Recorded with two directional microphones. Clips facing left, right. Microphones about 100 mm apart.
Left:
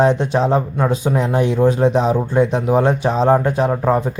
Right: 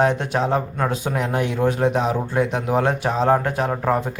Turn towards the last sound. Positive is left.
turn(degrees=25)  # may be behind; listen again after turning